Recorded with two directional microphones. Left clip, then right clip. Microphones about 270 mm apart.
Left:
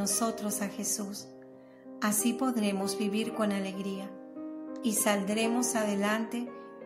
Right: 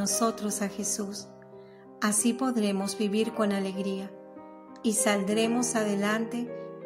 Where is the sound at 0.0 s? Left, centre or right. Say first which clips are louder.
Right 4 dB; centre.